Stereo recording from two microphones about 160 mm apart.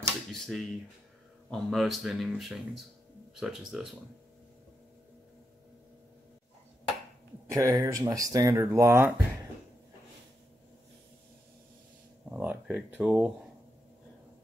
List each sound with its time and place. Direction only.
0.3 s a sound: centre (ahead or behind)
1.5 s speech: centre (ahead or behind)
7.5 s speech: 20° right (ahead or behind)
12.3 s speech: 10° right (ahead or behind)